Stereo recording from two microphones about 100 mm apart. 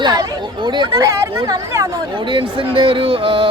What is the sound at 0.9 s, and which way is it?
Speech, 35° right (ahead or behind).